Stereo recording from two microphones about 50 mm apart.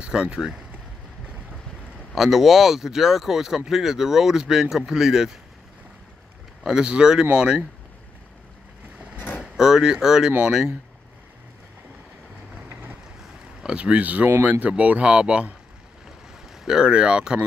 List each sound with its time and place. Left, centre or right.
0.0 s speech: centre
2.1 s speech: centre
6.7 s speech: centre
9.1 s vehicle: left
9.4 s speech: centre
13.6 s speech: centre
16.6 s speech: centre